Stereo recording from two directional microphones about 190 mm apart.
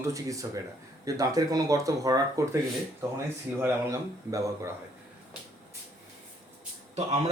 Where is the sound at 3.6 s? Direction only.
15° right (ahead or behind).